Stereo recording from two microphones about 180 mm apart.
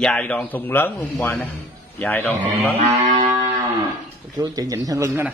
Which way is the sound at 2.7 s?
35° right (ahead or behind).